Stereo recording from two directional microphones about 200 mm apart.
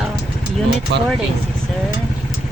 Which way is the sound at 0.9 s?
60° right (ahead or behind).